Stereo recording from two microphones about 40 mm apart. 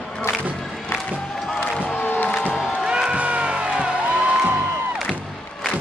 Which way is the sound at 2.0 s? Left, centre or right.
Left.